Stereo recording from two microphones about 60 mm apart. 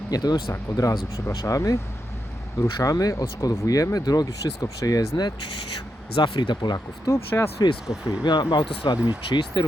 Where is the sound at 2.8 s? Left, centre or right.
Left.